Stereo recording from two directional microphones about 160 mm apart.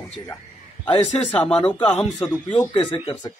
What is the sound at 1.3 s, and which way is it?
Speech, 5° left (ahead or behind).